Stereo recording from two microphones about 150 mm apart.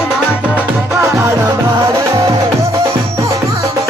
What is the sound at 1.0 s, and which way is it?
Music, 20° right (ahead or behind).